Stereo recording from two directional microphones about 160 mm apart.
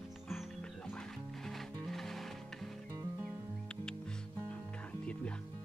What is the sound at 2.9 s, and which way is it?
Music, 20° right (ahead or behind).